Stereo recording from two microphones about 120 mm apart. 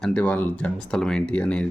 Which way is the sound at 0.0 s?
10° left (ahead or behind).